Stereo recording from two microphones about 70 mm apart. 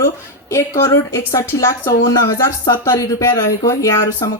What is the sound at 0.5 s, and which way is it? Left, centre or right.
Speech, left.